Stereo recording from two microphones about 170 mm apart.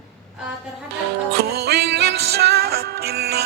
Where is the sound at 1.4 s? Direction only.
70° right (ahead or behind).